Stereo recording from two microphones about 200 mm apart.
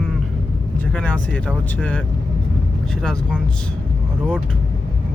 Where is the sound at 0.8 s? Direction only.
5° left (ahead or behind).